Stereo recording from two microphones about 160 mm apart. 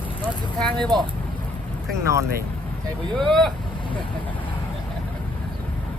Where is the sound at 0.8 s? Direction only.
25° right (ahead or behind).